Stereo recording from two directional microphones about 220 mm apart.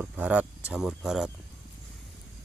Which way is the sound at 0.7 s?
Centre (ahead or behind).